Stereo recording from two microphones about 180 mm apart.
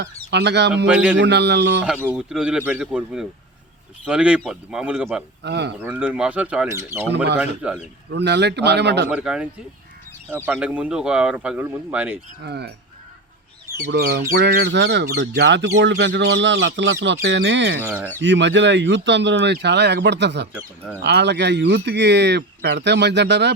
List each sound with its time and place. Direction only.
0.0 s speech: 70° right (ahead or behind)
0.9 s speech: 5° right (ahead or behind)
1.1 s speech: 70° right (ahead or behind)
1.8 s speech: 10° right (ahead or behind)
5.4 s speech: 70° right (ahead or behind)
5.8 s speech: 10° right (ahead or behind)
8.1 s speech: 70° right (ahead or behind)
9.0 s speech: 5° right (ahead or behind)
12.4 s speech: 70° right (ahead or behind)
13.9 s speech: 65° right (ahead or behind)
17.8 s speech: 10° right (ahead or behind)
18.2 s speech: 85° right